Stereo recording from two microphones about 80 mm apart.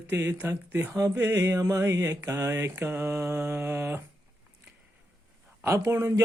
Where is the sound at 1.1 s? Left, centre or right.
Right.